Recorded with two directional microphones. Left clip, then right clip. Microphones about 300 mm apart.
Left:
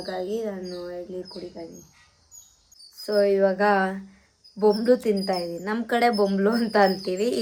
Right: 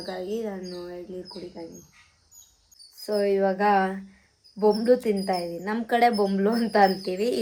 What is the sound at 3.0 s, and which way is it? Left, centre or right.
Speech, centre.